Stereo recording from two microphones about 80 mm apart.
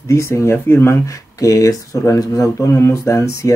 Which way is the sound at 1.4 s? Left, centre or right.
Left.